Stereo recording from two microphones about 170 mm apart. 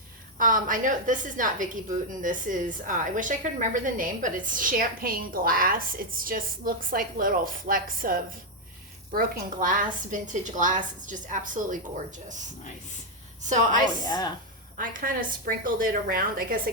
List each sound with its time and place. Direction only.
0.3 s a woman's voice: 55° right (ahead or behind)
13.4 s a woman's voice: 45° right (ahead or behind)
14.0 s a woman's voice: 25° left (ahead or behind)
14.8 s a woman's voice: 55° right (ahead or behind)